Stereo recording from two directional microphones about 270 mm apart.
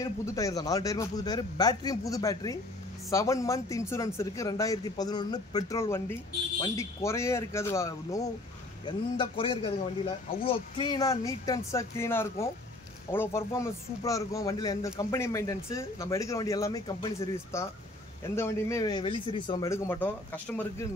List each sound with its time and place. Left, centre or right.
0.0 s a man's voice: centre